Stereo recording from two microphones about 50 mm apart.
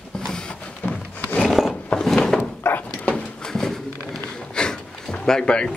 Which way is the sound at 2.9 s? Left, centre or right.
Left.